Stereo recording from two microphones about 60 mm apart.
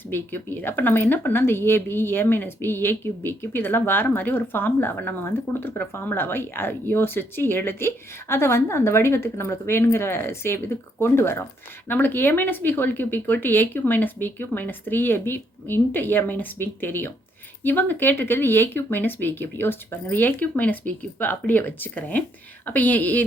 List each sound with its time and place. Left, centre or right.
0.1 s speech: left
11.9 s a woman's voice: left